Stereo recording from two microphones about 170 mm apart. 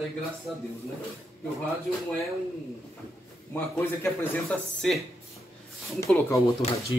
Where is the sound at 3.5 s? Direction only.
15° left (ahead or behind).